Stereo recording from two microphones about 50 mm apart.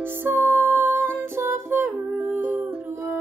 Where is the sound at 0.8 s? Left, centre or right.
Right.